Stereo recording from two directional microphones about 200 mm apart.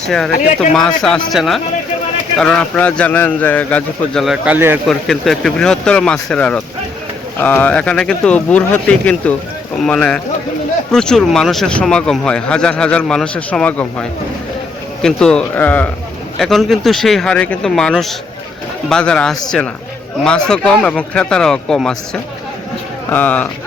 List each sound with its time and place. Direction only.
0.3 s speech: 40° left (ahead or behind)
0.7 s a man's voice: 5° left (ahead or behind)
4.9 s a man's voice: centre (ahead or behind)